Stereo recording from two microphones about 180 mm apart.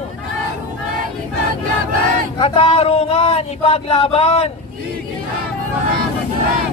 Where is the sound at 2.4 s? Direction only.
35° left (ahead or behind).